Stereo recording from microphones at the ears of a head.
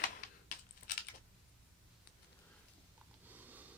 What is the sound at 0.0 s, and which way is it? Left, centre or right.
Typing, left.